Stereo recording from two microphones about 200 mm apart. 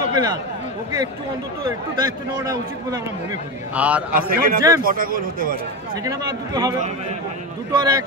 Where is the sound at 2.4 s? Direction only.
15° right (ahead or behind).